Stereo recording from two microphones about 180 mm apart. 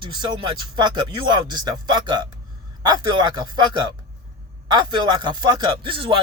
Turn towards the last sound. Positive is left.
turn(degrees=-30)  # may be behind; listen again after turning